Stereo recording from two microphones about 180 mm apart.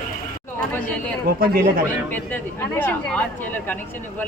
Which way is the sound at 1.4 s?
55° right (ahead or behind).